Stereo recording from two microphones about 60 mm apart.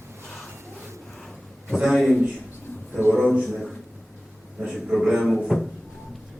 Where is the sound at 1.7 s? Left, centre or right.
Centre.